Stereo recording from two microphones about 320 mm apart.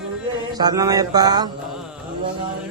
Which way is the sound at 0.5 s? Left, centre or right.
Centre.